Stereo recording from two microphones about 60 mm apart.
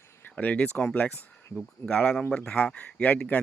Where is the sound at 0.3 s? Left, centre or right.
Left.